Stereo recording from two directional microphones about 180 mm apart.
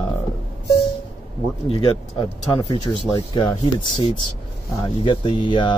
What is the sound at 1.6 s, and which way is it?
Speech, 25° left (ahead or behind).